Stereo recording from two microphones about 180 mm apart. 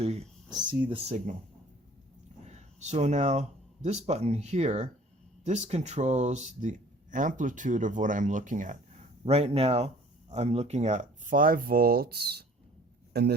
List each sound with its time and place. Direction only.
0.0 s speech: 35° right (ahead or behind)
2.5 s speech: 40° right (ahead or behind); by 13.3 s 65° right (ahead or behind)